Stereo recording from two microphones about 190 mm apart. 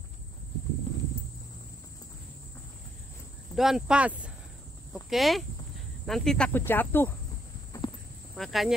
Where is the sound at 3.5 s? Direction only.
Centre (ahead or behind).